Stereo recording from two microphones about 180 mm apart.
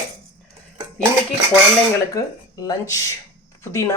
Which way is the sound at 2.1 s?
20° left (ahead or behind).